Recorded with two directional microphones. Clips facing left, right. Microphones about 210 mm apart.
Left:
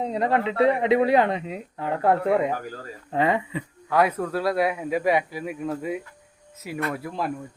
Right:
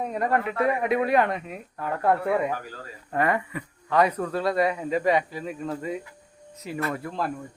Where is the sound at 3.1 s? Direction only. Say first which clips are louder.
Left 2 dB; 20° left (ahead or behind).